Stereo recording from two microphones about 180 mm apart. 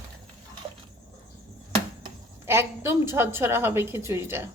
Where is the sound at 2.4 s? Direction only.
15° right (ahead or behind).